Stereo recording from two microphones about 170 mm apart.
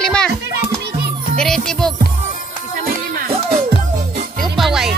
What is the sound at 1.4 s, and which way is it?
Speech, 5° left (ahead or behind).